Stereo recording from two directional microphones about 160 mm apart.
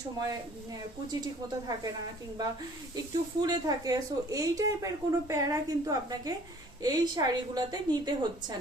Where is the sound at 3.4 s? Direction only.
25° right (ahead or behind).